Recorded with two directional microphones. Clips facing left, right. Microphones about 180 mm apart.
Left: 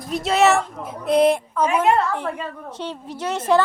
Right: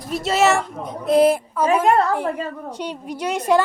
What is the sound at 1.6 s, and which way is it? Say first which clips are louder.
Speech: right 2 dB; 35° right (ahead or behind).